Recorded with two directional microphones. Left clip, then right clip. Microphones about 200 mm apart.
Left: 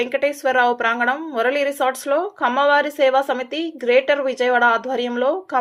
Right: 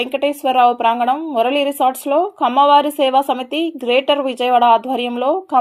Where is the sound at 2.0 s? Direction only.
25° right (ahead or behind).